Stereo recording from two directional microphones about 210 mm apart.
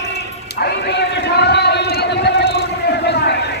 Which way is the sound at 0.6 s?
50° left (ahead or behind).